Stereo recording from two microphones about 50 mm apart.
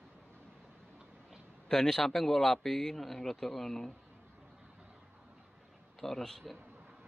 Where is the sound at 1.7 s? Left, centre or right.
Centre.